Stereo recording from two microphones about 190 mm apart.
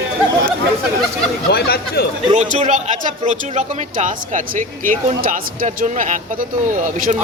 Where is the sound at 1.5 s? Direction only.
55° left (ahead or behind).